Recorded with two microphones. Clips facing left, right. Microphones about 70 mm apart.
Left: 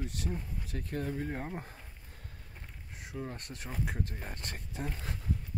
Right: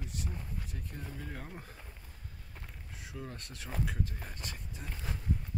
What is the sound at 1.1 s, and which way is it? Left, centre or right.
Speech, left.